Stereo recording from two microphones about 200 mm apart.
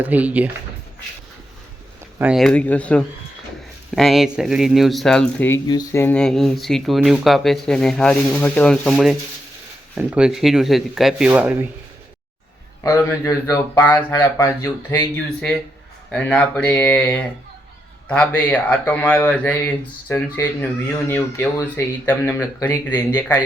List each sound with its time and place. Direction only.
0.0 s speech: 10° right (ahead or behind)
2.1 s speech: 5° right (ahead or behind)
12.8 s speech: 15° left (ahead or behind)